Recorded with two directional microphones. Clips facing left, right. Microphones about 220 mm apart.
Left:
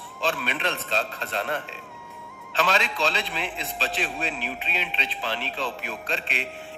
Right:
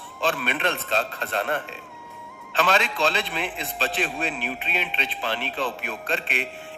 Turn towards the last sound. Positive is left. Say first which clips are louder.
# right 3 dB
turn(degrees=-55)  # may be behind; listen again after turning